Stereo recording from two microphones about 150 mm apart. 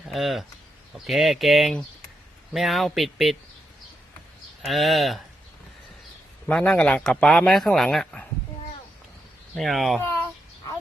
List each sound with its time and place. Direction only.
0.1 s speech: centre (ahead or behind)
4.6 s speech: centre (ahead or behind)
6.5 s speech: 5° left (ahead or behind)
9.6 s speech: centre (ahead or behind)
10.0 s speech: 15° left (ahead or behind)